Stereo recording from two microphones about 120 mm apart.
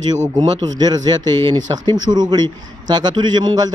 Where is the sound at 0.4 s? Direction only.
35° right (ahead or behind).